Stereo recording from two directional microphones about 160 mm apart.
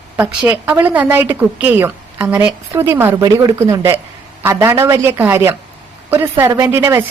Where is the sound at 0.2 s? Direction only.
10° right (ahead or behind).